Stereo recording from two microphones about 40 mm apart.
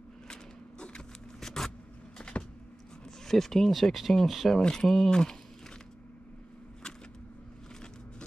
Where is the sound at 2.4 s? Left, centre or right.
Left.